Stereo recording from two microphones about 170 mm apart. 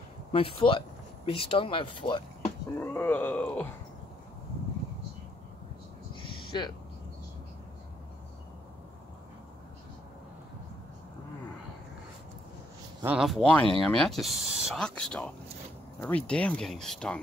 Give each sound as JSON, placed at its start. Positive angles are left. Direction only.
{"t": 0.3, "sound": "speech", "side_deg": 30}
{"t": 2.8, "sound": "a sound", "side_deg": 15}
{"t": 6.5, "sound": "speech", "side_deg": 25}
{"t": 13.0, "sound": "speech", "side_deg": -5}